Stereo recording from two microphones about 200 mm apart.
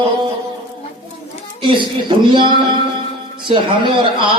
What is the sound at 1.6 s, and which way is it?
Speech, 25° right (ahead or behind).